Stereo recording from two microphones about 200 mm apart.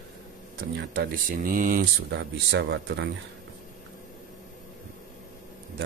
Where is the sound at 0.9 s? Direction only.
45° right (ahead or behind).